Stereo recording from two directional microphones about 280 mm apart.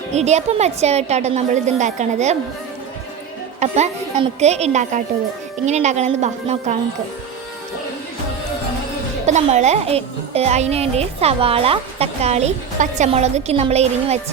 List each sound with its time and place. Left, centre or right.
0.1 s a child's voice: right
3.6 s a child's voice: right
9.2 s a child's voice: right